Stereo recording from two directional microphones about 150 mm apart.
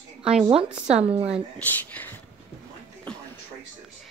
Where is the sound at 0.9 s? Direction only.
45° right (ahead or behind).